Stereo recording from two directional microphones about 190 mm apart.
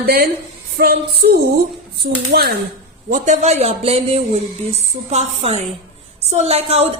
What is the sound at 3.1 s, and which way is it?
Speech, 35° right (ahead or behind).